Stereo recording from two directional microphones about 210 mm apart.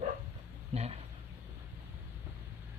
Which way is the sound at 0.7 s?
30° right (ahead or behind).